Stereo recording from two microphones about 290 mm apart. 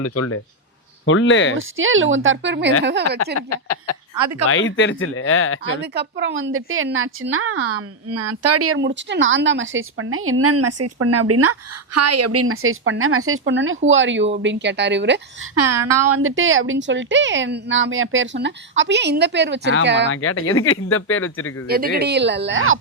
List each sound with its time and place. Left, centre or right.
0.0 s speech: left
1.0 s speech: left
1.5 s a woman's voice: right
3.5 s speech: left
4.2 s speech: right
4.4 s speech: left
5.8 s a woman's voice: right
15.5 s a woman's voice: right
20.1 s speech: left
21.7 s a woman's voice: right